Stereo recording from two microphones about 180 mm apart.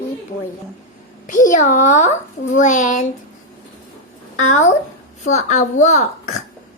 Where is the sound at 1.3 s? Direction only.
45° left (ahead or behind).